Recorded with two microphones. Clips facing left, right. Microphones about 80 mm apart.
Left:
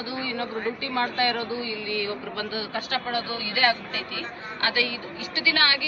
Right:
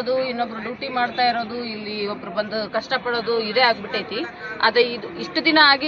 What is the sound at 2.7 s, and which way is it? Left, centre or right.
A man's voice, right.